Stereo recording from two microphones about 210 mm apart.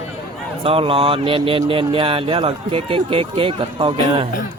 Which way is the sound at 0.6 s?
25° right (ahead or behind).